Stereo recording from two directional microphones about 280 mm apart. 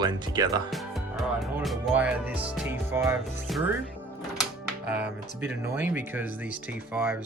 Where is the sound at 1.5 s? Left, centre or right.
Centre.